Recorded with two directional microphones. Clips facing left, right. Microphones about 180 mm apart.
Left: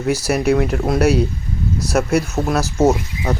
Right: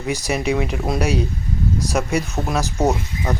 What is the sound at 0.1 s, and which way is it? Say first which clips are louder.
Speech: left 4 dB; 15° right (ahead or behind).